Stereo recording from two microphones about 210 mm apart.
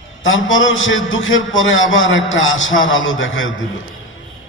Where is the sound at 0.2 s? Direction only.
65° left (ahead or behind).